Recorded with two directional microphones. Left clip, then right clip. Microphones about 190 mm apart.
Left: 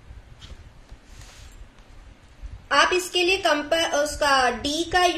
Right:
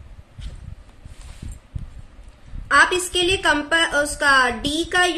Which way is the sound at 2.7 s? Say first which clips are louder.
Right 4 dB; 45° right (ahead or behind).